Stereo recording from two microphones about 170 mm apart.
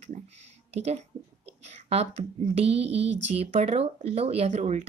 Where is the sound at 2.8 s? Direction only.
90° right.